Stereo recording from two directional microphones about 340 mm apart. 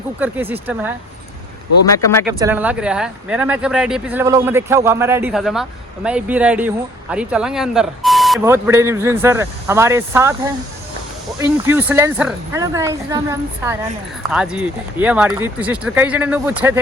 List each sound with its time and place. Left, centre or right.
0.2 s speech: centre
2.4 s speech: centre